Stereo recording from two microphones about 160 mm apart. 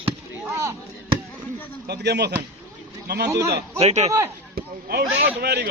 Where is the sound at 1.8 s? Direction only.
90° right.